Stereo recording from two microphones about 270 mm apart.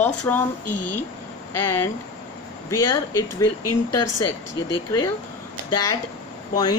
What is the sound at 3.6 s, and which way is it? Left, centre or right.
Speech, left.